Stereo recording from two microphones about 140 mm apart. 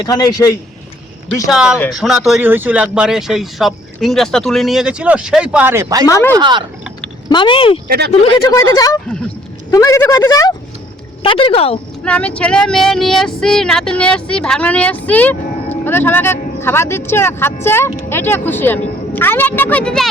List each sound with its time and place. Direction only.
0.0 s speech: 30° left (ahead or behind)
1.5 s speech: 5° right (ahead or behind)
6.1 s speech: 20° left (ahead or behind)
6.3 s speech: 35° right (ahead or behind)
7.3 s speech: 35° left (ahead or behind)
8.4 s speech: 25° left (ahead or behind)
11.2 s a woman's voice: 40° left (ahead or behind)
12.0 s speech: 10° left (ahead or behind)